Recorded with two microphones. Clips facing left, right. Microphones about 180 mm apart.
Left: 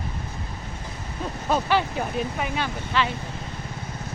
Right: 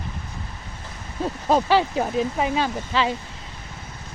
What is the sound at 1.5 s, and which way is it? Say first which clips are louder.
Speech: right 4 dB; 35° right (ahead or behind).